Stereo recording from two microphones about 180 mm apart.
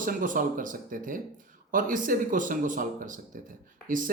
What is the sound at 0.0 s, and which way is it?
Speech, 50° right (ahead or behind).